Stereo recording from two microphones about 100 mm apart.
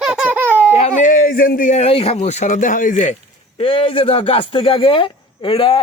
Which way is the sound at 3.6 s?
65° left (ahead or behind).